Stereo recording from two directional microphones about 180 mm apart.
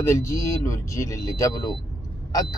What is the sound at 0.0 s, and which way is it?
Speech, 15° left (ahead or behind).